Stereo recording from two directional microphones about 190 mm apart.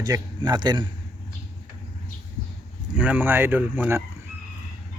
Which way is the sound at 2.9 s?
10° right (ahead or behind).